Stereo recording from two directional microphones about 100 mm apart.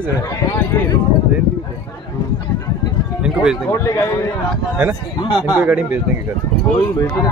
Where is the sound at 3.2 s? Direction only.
5° right (ahead or behind).